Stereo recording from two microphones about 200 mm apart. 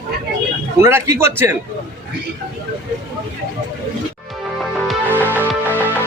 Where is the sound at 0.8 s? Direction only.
10° right (ahead or behind).